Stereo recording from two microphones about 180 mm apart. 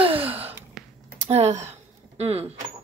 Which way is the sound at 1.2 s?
40° right (ahead or behind).